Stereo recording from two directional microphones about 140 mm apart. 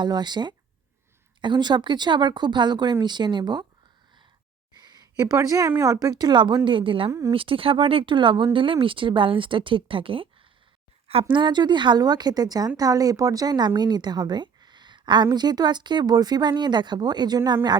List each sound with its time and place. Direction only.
0.0 s speech: 30° right (ahead or behind)
5.1 s speech: 25° right (ahead or behind)
7.1 s speech: 25° right (ahead or behind)
7.3 s speech: 40° right (ahead or behind)
11.3 s speech: 30° right (ahead or behind)